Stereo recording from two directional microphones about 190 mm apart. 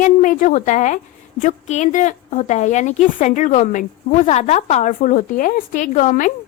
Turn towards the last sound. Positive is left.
turn(degrees=40)  # may be behind; listen again after turning